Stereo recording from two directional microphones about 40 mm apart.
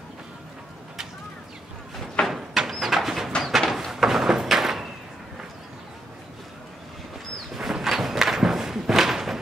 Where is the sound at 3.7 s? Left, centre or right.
Centre.